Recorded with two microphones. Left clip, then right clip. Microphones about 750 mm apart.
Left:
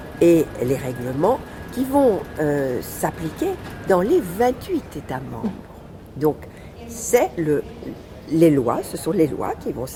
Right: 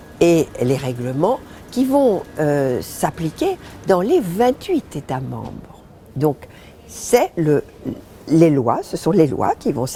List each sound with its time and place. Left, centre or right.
0.2 s speech: right
7.1 s speech: right